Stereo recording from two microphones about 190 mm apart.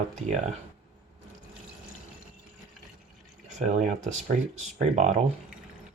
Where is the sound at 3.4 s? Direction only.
40° right (ahead or behind).